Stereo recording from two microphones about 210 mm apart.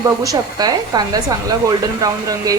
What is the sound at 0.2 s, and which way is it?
Speech, 15° right (ahead or behind).